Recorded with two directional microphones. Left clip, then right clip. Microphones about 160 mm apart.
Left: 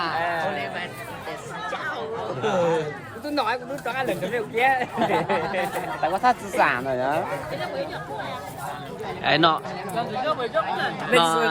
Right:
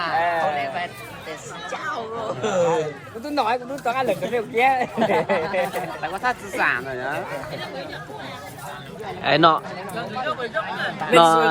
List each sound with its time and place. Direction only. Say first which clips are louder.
0.2 s a sound: right 4 dB; 35° right (ahead or behind)
2.4 s a sound: right 2 dB; 40° right (ahead or behind)
3.3 s speech: right 3 dB; 40° right (ahead or behind)
6.0 s speech: left 6 dB; 75° left (ahead or behind)
9.2 s speech: right 3 dB; 5° left (ahead or behind)
9.9 s speech: left 2 dB; 80° left
11.1 s speech: right 6 dB; centre (ahead or behind)